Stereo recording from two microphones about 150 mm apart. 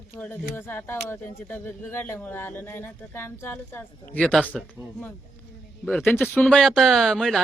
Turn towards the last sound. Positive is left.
turn(degrees=0)  # may be behind; listen again after turning